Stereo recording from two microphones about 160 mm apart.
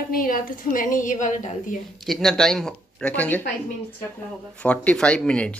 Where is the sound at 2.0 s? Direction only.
Centre (ahead or behind).